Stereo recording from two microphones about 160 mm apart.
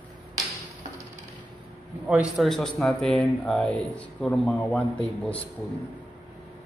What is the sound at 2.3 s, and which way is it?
Speech, centre (ahead or behind).